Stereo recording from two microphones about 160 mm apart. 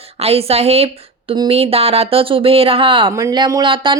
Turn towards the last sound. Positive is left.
turn(degrees=-30)  # may be behind; listen again after turning